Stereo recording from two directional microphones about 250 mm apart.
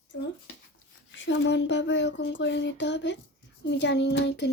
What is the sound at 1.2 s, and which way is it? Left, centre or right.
A child's voice, left.